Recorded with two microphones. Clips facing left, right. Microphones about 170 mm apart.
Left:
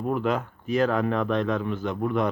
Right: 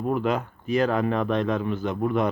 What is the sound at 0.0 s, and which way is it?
Speech, 5° right (ahead or behind).